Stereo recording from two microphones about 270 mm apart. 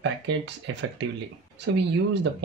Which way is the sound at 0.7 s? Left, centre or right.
Right.